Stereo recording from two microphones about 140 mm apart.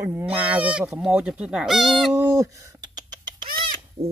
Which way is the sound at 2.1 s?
20° right (ahead or behind).